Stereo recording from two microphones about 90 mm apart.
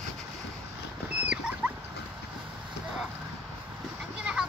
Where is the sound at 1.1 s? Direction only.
10° right (ahead or behind).